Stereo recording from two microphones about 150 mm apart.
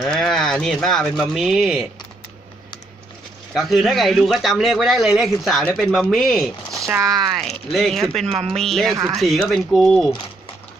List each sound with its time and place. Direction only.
0.0 s speech: 5° left (ahead or behind)
3.5 s a man's voice: centre (ahead or behind)
8.3 s speech: 40° right (ahead or behind)
8.5 s a man's voice: centre (ahead or behind)